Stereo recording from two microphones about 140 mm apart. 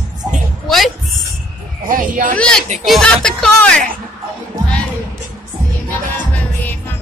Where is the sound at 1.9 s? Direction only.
75° right (ahead or behind).